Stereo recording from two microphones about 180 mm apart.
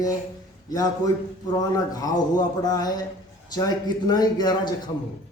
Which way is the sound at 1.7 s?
20° left (ahead or behind).